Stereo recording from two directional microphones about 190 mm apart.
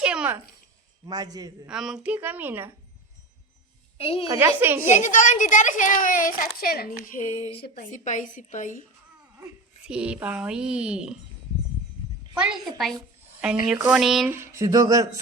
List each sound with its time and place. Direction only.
0.0 s babbling: 5° right (ahead or behind)
1.0 s a man's voice: 20° right (ahead or behind)
1.6 s a woman's voice: 5° right (ahead or behind)
3.9 s a woman's voice: 30° left (ahead or behind)
4.3 s a woman's voice: 10° right (ahead or behind)
4.9 s a woman's voice: 40° left (ahead or behind)
9.8 s speech: 5° right (ahead or behind)
12.4 s speech: 5° right (ahead or behind)
14.3 s a woman's voice: 15° right (ahead or behind)